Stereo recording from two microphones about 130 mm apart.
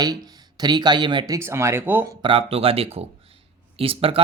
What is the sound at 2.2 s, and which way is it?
Speech, 45° right (ahead or behind).